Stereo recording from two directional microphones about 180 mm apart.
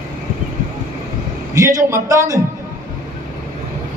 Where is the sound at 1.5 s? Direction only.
15° right (ahead or behind).